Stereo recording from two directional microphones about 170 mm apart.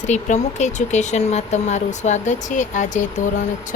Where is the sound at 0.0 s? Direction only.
45° left (ahead or behind).